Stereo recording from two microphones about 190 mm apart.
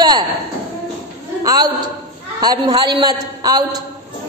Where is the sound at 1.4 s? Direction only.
20° right (ahead or behind).